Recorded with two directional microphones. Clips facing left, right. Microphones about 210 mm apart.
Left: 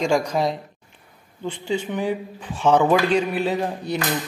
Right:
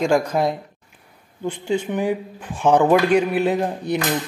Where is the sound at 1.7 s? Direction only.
10° right (ahead or behind).